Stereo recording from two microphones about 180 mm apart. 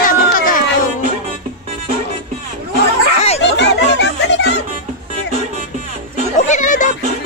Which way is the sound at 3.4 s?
75° left (ahead or behind).